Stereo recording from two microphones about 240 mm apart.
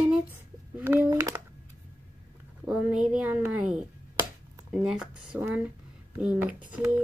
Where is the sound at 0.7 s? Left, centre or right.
Centre.